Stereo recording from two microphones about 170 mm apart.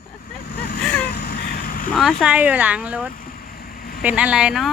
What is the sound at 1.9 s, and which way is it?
Speech, 5° left (ahead or behind).